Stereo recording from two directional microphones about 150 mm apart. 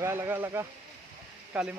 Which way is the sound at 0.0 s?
15° right (ahead or behind).